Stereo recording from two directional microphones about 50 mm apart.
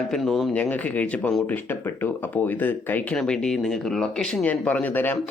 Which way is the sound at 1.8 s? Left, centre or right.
Left.